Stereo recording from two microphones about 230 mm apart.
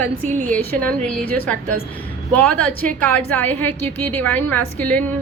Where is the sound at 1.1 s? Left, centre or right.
Centre.